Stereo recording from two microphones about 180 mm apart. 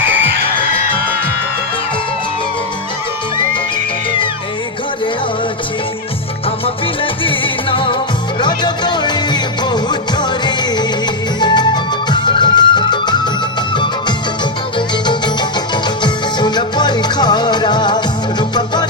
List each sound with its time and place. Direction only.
7.0 s music: 30° left (ahead or behind)
15.7 s music: 25° left (ahead or behind)